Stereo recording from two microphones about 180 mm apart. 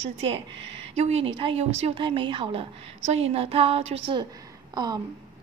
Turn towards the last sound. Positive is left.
turn(degrees=-25)  # may be behind; listen again after turning